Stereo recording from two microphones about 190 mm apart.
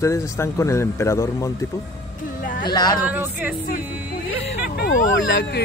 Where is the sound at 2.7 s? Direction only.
20° left (ahead or behind).